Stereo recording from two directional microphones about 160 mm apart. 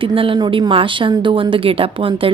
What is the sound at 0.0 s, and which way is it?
A woman's voice, 35° right (ahead or behind).